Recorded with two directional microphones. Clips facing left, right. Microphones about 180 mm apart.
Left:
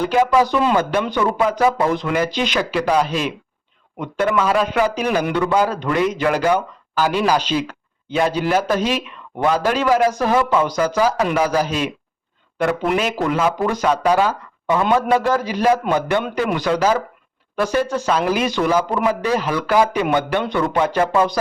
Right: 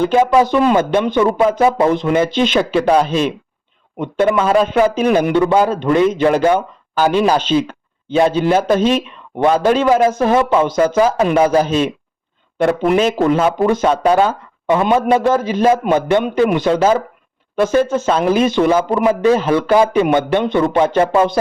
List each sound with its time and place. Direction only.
0.0 s a man's voice: 25° right (ahead or behind)